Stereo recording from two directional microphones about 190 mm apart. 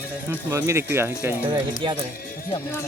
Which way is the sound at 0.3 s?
15° right (ahead or behind).